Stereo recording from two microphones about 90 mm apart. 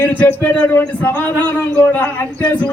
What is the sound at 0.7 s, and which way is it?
A man's voice, 25° left (ahead or behind).